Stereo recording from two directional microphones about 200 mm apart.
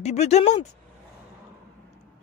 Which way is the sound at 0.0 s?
35° left (ahead or behind).